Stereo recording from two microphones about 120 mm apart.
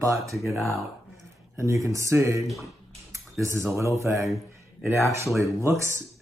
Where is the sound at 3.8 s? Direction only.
25° right (ahead or behind).